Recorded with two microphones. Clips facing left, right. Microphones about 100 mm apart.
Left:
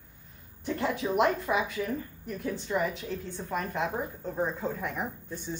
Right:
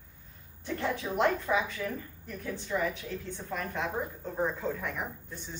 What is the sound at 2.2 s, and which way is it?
Speech, 15° left (ahead or behind).